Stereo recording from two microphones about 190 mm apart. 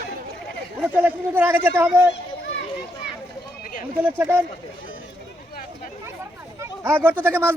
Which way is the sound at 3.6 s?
45° left (ahead or behind).